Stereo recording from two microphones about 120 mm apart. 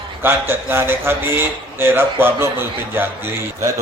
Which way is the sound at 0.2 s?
20° right (ahead or behind).